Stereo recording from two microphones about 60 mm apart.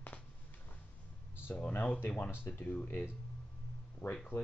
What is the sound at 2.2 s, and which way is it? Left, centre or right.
Speech, left.